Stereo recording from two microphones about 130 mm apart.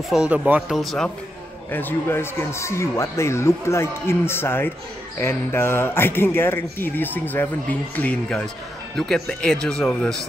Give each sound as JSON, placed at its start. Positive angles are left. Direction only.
{"t": 0.1, "sound": "speech", "side_deg": -10}
{"t": 1.7, "sound": "speech", "side_deg": 15}